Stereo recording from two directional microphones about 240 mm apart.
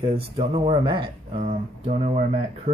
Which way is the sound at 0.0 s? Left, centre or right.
Right.